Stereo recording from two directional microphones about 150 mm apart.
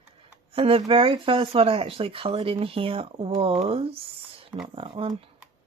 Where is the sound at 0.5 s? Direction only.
40° right (ahead or behind).